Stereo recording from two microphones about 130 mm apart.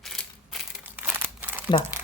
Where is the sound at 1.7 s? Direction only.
35° left (ahead or behind).